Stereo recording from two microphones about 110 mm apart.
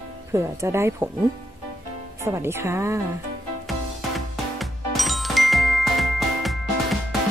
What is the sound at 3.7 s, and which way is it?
Music, centre (ahead or behind).